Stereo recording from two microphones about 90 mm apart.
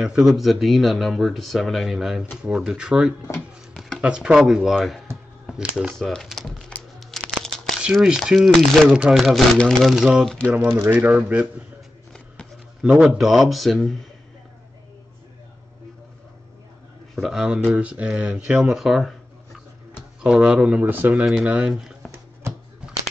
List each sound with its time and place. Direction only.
0.0 s speech: 5° right (ahead or behind)
5.9 s speech: 5° left (ahead or behind)
7.8 s speech: 5° right (ahead or behind)
10.6 s speech: 20° right (ahead or behind)
12.8 s speech: centre (ahead or behind)
17.1 s a man's voice: centre (ahead or behind); by 21.1 s 20° right (ahead or behind)
21.1 s speech: 5° right (ahead or behind)